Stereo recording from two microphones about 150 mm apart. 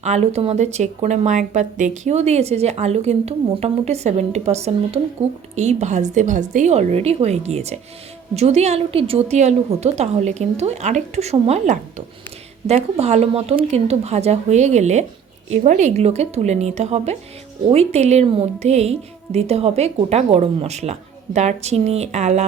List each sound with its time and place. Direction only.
0.0 s speech: 45° right (ahead or behind)